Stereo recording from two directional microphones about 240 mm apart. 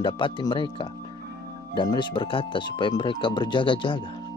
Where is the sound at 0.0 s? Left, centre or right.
Centre.